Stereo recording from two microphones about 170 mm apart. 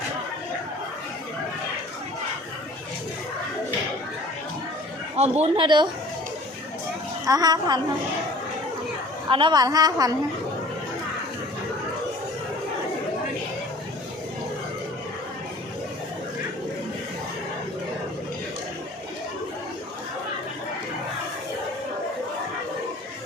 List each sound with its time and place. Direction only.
5.1 s a woman's voice: 40° right (ahead or behind)
7.3 s a woman's voice: 20° right (ahead or behind)
9.3 s a woman's voice: 25° right (ahead or behind)